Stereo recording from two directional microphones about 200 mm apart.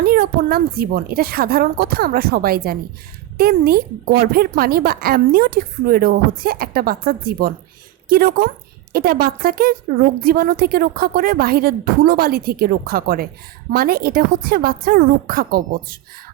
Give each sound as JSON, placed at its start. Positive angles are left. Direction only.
{"t": 0.0, "sound": "a woman's voice", "side_deg": -50}